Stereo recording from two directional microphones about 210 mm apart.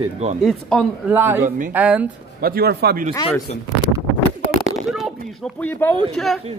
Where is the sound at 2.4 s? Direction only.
45° right (ahead or behind).